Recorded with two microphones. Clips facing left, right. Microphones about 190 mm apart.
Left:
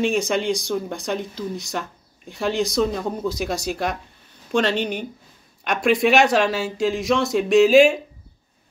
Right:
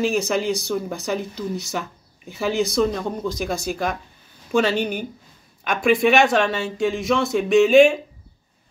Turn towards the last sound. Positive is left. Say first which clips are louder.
# even
turn(degrees=0)  # may be behind; listen again after turning